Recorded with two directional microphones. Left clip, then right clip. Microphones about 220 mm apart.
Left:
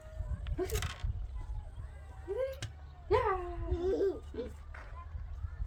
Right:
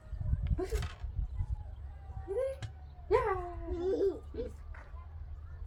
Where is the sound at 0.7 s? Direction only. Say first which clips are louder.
Left 2 dB; 40° left (ahead or behind).